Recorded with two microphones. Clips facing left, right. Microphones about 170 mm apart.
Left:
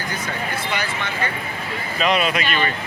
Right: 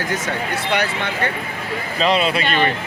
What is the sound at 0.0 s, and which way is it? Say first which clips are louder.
Speech: right 4 dB; 80° right.